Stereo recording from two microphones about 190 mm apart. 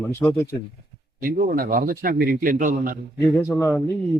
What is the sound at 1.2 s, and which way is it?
A man's voice, 50° right (ahead or behind).